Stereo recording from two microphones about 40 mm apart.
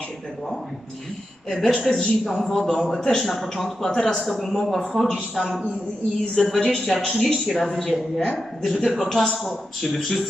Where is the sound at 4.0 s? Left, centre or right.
Centre.